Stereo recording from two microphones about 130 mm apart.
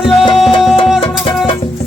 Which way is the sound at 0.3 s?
Centre (ahead or behind).